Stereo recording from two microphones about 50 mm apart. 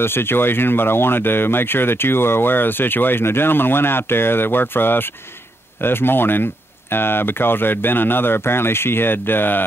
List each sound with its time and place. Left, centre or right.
0.0 s speech: left